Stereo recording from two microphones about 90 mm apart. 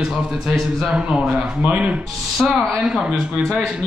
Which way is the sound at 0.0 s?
5° right (ahead or behind).